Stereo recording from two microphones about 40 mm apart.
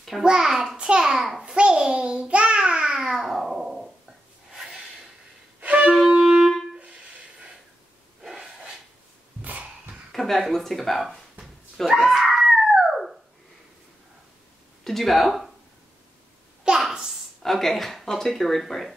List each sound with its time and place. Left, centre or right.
0.2 s a child's voice: centre
1.1 s a child's voice: centre
1.4 s babbling: right
3.3 s a sound: centre
4.5 s snort: centre
5.6 s wind instrument: right
5.9 s wind instrument: centre
8.2 s sneeze: centre
9.4 s a sound: right
10.1 s a sound: centre
12.7 s dog: centre
14.9 s speech: centre
16.9 s a sound: centre
17.4 s speech: centre